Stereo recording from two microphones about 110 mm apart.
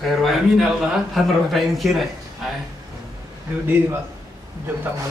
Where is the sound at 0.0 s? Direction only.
Centre (ahead or behind).